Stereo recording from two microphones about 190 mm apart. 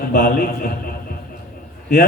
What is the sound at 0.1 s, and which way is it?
Music, 50° left (ahead or behind).